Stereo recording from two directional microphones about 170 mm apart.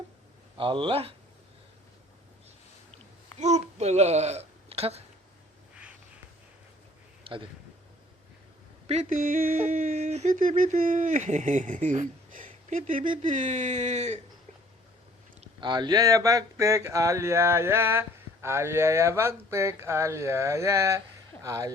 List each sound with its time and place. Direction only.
0.5 s speech: 30° right (ahead or behind)
3.3 s speech: 40° right (ahead or behind)
7.3 s speech: 30° right (ahead or behind)
8.9 s speech: 45° right (ahead or behind)
15.6 s speech: 25° right (ahead or behind)